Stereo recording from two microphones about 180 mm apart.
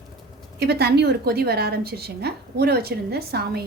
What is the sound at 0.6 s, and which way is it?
A woman's voice, 65° right (ahead or behind).